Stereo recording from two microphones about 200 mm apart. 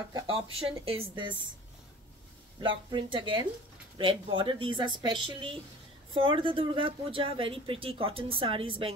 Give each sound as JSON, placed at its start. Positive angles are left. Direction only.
{"t": 0.1, "sound": "speech", "side_deg": -25}
{"t": 2.9, "sound": "speech", "side_deg": -25}